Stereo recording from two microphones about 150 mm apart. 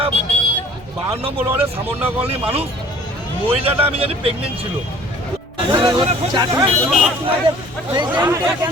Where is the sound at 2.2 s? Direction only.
40° right (ahead or behind).